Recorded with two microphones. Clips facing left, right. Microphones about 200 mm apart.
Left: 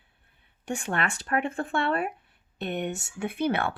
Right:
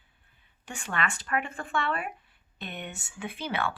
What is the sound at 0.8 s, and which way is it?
Speech, 50° left (ahead or behind).